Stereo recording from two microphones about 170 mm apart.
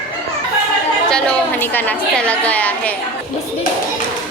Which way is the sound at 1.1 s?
5° left (ahead or behind).